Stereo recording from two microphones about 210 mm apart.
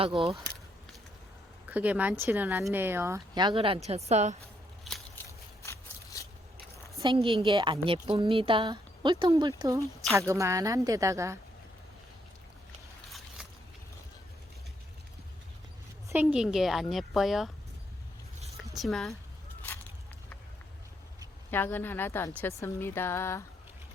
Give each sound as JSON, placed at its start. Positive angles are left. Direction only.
{"t": 0.0, "sound": "a woman's voice", "side_deg": -25}
{"t": 1.7, "sound": "a woman's voice", "side_deg": -5}
{"t": 4.9, "sound": "a sound", "side_deg": 0}
{"t": 5.6, "sound": "a sound", "side_deg": 15}
{"t": 7.0, "sound": "a woman's voice", "side_deg": -25}
{"t": 13.1, "sound": "a sound", "side_deg": 0}
{"t": 16.2, "sound": "a woman's voice", "side_deg": 0}
{"t": 18.8, "sound": "a woman's voice", "side_deg": 0}
{"t": 21.5, "sound": "a woman's voice", "side_deg": 10}